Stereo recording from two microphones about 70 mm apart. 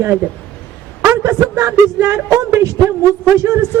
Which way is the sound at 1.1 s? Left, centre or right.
Right.